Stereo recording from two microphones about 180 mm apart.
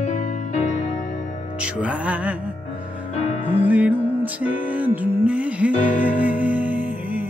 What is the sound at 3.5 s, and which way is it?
Music, 10° right (ahead or behind).